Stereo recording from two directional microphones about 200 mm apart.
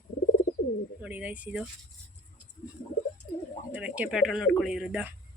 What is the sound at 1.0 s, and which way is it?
Speech, 10° right (ahead or behind).